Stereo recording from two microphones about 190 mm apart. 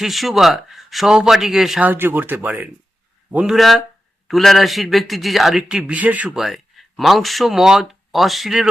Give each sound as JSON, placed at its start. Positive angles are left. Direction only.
{"t": 0.0, "sound": "a man's voice", "side_deg": 0}